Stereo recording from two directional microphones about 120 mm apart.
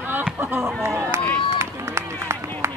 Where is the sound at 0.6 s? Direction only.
Centre (ahead or behind).